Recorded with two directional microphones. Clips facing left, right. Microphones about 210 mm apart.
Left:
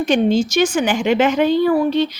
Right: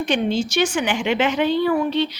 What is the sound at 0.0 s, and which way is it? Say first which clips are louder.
Speech: left 5 dB; 45° left (ahead or behind).